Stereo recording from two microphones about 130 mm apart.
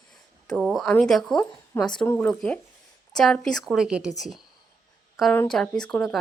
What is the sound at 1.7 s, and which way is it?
A woman's voice, 20° left (ahead or behind).